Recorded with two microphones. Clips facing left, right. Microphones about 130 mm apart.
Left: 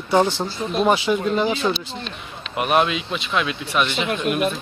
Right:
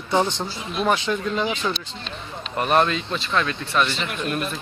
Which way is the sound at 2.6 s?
5° left (ahead or behind).